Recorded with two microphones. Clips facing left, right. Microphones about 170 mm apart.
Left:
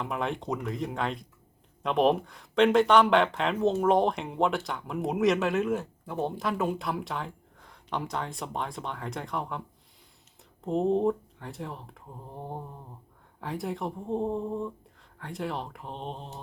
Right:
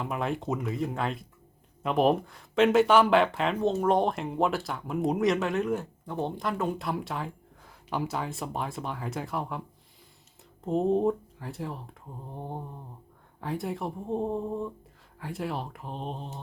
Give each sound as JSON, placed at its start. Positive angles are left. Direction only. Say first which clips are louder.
{"t": 0.0, "sound": "speech", "louder": "right 1 dB", "side_deg": -5}
{"t": 10.7, "sound": "speech", "louder": "even", "side_deg": 0}